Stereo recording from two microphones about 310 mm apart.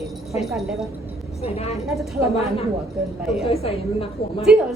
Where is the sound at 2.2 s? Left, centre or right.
Centre.